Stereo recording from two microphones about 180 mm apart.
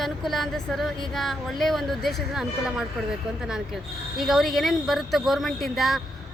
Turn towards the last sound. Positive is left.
turn(degrees=0)  # may be behind; listen again after turning